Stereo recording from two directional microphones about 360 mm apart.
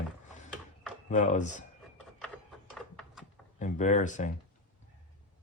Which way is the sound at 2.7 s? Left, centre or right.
Centre.